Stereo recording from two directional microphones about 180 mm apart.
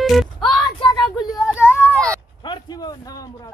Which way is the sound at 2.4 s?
25° left (ahead or behind).